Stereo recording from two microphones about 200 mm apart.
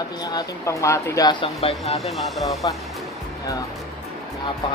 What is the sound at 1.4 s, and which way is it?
Speech, 30° left (ahead or behind).